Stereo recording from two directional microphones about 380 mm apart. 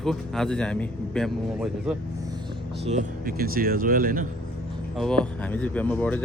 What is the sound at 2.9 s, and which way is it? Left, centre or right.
Speech, centre.